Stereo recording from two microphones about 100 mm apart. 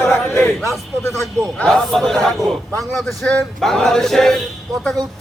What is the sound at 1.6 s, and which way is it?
A man's voice, 5° left (ahead or behind).